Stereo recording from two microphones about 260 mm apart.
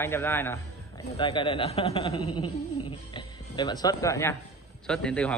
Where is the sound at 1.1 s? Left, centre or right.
Centre.